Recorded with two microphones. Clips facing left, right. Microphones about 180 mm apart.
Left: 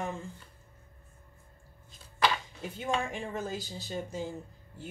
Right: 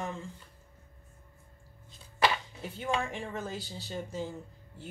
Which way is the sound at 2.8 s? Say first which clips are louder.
Even; 15° left (ahead or behind).